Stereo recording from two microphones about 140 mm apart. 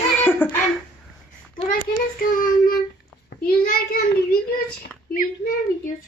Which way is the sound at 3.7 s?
90° left.